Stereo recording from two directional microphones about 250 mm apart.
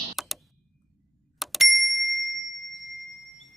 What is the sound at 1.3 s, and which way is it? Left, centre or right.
Doorbell, centre.